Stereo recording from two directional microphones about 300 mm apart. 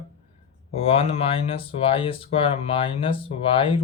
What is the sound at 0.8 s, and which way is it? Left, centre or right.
Speech, centre.